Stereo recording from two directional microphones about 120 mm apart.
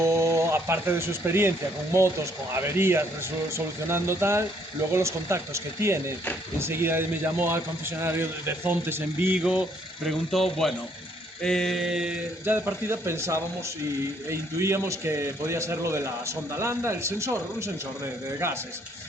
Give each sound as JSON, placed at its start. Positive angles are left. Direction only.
{"t": 0.0, "sound": "a man's voice", "side_deg": -25}
{"t": 10.1, "sound": "speech", "side_deg": 0}
{"t": 12.5, "sound": "a man's voice", "side_deg": -20}